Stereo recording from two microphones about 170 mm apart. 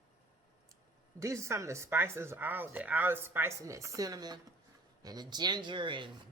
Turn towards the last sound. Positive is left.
turn(degrees=-30)  # may be behind; listen again after turning